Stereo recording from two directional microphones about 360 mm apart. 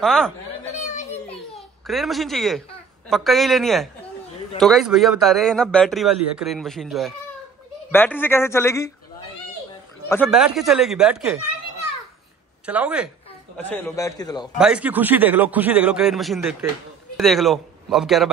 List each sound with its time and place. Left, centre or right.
0.0 s speech: centre
0.7 s children playing: centre
1.9 s speech: centre
10.0 s speech: centre
12.6 s speech: centre
14.6 s speech: centre